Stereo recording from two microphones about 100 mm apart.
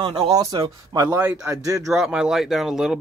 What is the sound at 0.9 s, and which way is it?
Speech, 40° right (ahead or behind).